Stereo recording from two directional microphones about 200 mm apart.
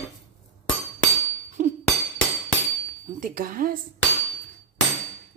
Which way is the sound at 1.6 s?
45° right (ahead or behind).